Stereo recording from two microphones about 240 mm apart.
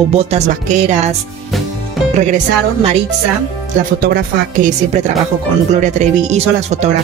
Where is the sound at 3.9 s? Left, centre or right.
Right.